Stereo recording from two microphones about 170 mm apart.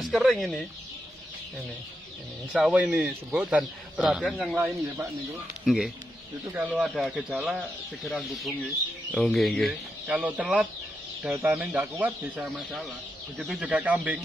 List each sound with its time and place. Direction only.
0.0 s speech: centre (ahead or behind)
2.5 s speech: 10° right (ahead or behind)
4.2 s speech: 5° left (ahead or behind)
4.5 s speech: 10° right (ahead or behind)
6.5 s speech: 10° right (ahead or behind)